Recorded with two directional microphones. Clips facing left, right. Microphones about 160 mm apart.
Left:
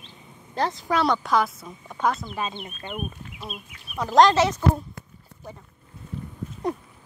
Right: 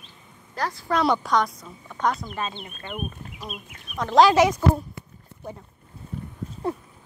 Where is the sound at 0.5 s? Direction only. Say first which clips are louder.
Left 3 dB; 25° left (ahead or behind).